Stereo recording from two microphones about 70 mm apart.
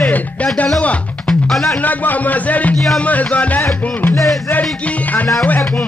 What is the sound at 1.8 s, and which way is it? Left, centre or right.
Speech, left.